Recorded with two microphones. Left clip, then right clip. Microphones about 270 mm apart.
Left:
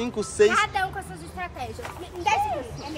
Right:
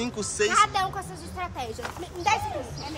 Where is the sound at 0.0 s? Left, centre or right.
Centre.